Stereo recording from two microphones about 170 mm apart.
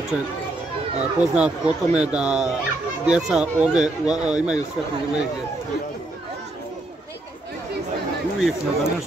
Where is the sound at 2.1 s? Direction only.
5° right (ahead or behind).